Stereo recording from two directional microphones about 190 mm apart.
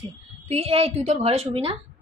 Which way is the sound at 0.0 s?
30° right (ahead or behind).